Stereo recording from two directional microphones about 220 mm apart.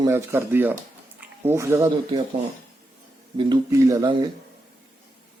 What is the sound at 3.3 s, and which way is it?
Speech, 20° right (ahead or behind).